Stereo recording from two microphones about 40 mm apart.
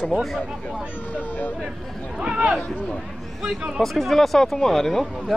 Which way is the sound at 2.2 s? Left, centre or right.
Right.